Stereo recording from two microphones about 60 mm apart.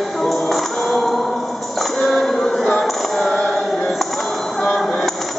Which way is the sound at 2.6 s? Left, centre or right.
Centre.